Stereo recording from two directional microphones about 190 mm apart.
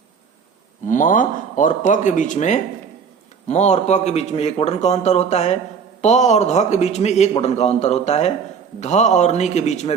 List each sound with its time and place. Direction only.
0.9 s a man's voice: 45° left (ahead or behind)